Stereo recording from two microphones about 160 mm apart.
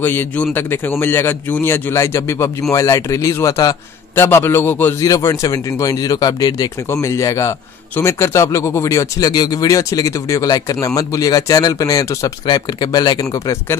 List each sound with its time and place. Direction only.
0.0 s a man's voice: 10° left (ahead or behind)